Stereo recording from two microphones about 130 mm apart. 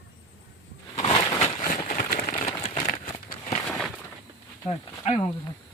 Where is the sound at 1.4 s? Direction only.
75° left (ahead or behind).